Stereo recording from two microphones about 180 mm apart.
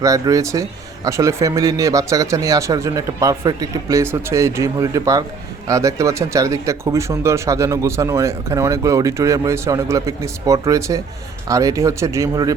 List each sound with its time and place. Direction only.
0.0 s speech: 20° right (ahead or behind)